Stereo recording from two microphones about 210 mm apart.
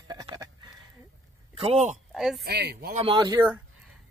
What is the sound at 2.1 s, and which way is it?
Speech, centre (ahead or behind).